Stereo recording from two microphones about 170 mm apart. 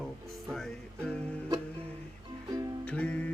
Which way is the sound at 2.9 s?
5° left (ahead or behind).